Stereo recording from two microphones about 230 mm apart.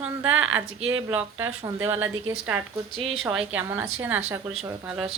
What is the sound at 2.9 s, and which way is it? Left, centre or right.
Speech, right.